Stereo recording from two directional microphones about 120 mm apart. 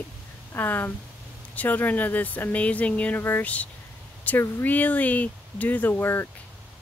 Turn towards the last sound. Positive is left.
turn(degrees=15)  # may be behind; listen again after turning